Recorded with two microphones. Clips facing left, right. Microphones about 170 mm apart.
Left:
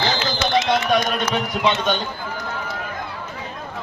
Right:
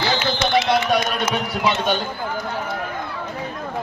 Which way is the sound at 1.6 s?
5° right (ahead or behind).